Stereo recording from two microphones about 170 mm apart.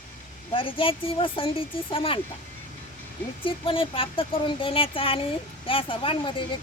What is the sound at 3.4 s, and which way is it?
Speech, 30° left (ahead or behind).